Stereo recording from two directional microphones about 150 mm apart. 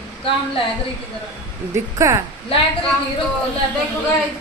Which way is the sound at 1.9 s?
20° right (ahead or behind).